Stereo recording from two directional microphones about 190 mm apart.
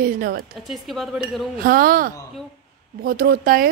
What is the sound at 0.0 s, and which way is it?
Speech, 50° right (ahead or behind).